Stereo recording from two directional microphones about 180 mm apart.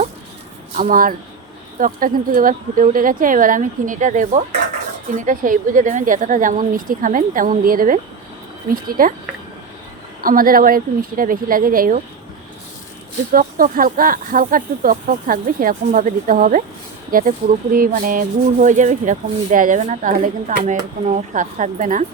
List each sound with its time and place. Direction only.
0.8 s speech: 50° right (ahead or behind)
10.2 s speech: 50° right (ahead or behind)
13.3 s speech: 50° right (ahead or behind)